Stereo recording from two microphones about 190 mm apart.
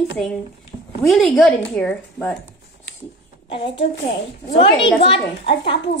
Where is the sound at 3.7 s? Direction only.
70° left (ahead or behind).